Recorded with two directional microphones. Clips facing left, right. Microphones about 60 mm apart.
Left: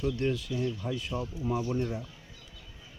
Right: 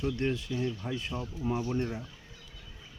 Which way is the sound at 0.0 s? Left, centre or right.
Right.